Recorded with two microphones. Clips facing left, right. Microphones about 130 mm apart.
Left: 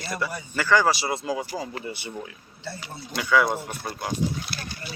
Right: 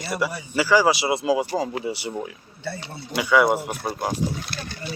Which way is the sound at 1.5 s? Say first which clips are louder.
Right 7 dB; 45° right (ahead or behind).